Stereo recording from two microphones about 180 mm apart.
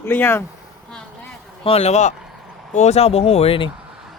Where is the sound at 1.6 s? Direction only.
35° left (ahead or behind).